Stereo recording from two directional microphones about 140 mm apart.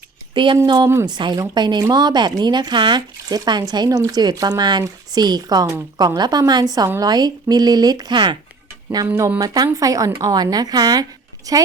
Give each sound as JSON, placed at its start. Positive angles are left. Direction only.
{"t": 0.3, "sound": "speech", "side_deg": -35}
{"t": 9.0, "sound": "speech", "side_deg": -15}